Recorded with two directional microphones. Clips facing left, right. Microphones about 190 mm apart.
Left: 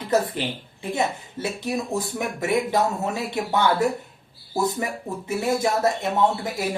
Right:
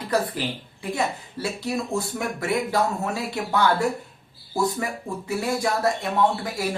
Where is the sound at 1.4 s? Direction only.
20° left (ahead or behind).